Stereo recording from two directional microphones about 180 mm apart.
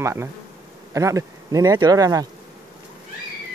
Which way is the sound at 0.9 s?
15° right (ahead or behind).